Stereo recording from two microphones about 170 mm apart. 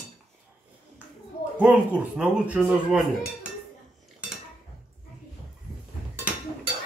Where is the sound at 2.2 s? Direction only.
5° right (ahead or behind).